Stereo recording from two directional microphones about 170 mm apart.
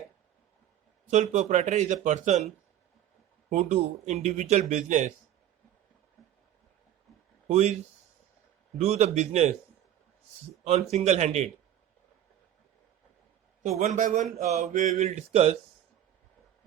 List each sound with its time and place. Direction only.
1.1 s speech: 45° right (ahead or behind)
3.5 s speech: 45° right (ahead or behind)
7.4 s speech: 40° right (ahead or behind)
8.8 s speech: 40° right (ahead or behind)
10.6 s speech: 40° right (ahead or behind)
13.6 s speech: 45° right (ahead or behind)